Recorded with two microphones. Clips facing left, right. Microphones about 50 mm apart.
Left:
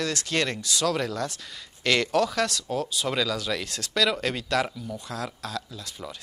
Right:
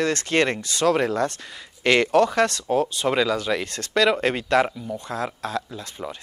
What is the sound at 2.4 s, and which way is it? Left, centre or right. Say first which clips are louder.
Speech: right 7 dB; right.